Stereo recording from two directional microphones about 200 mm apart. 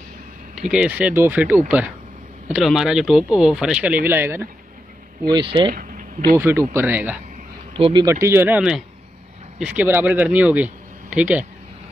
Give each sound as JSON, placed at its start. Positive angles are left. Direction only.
{"t": 0.6, "sound": "speech", "side_deg": -5}
{"t": 5.3, "sound": "speech", "side_deg": -25}
{"t": 5.8, "sound": "a sound", "side_deg": -40}
{"t": 6.3, "sound": "speech", "side_deg": -15}
{"t": 7.7, "sound": "speech", "side_deg": -25}